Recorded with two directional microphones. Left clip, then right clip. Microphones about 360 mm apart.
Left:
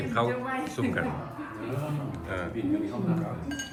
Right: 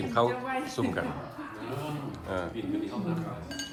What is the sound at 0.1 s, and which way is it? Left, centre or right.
Speech, centre.